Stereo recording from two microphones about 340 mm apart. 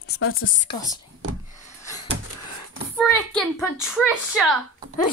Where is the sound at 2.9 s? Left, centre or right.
Centre.